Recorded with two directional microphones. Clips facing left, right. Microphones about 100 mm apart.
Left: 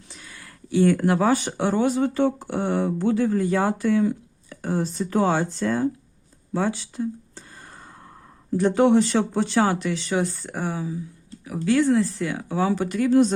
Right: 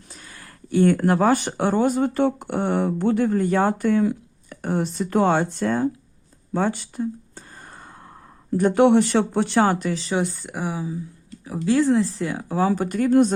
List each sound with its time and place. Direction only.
0.1 s speech: 45° right (ahead or behind)
6.5 s a sound: 50° right (ahead or behind)
8.5 s speech: 50° right (ahead or behind)
10.1 s speech: 20° right (ahead or behind)
11.4 s speech: 30° right (ahead or behind); by 13.3 s 50° right (ahead or behind)